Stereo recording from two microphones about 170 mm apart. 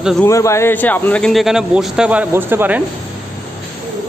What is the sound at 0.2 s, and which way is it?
A man's voice, 15° left (ahead or behind).